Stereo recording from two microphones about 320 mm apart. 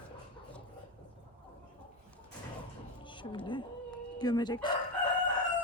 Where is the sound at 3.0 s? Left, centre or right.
Centre.